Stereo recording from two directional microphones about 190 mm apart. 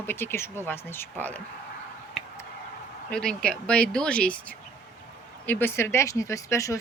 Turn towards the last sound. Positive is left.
turn(degrees=15)  # may be behind; listen again after turning